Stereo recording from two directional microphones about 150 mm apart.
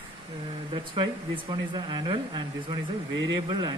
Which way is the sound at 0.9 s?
30° right (ahead or behind).